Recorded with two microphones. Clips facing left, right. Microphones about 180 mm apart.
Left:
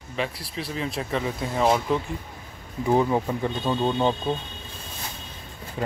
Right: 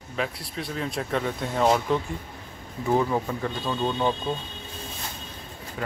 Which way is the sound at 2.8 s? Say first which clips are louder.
Left 2 dB; 15° left (ahead or behind).